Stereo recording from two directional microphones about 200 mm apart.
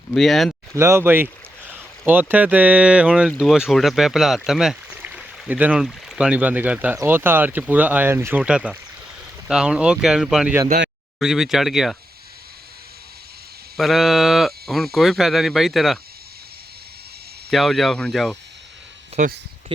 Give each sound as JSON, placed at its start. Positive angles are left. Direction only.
{"t": 0.1, "sound": "speech", "side_deg": 0}
{"t": 0.8, "sound": "speech", "side_deg": -10}
{"t": 13.7, "sound": "speech", "side_deg": 0}
{"t": 17.5, "sound": "speech", "side_deg": 0}
{"t": 19.1, "sound": "speech", "side_deg": -35}